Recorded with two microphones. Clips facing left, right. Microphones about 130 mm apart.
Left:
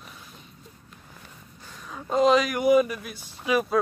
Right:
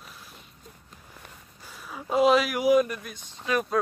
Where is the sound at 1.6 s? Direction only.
10° right (ahead or behind).